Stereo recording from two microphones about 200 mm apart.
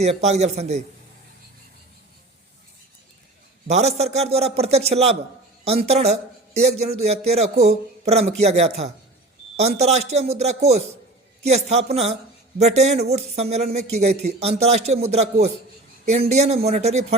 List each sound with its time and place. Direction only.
0.0 s a man's voice: 35° right (ahead or behind)
3.7 s a man's voice: 35° right (ahead or behind)